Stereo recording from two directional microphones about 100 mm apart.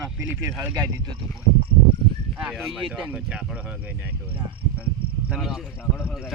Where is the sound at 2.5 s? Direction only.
Centre (ahead or behind).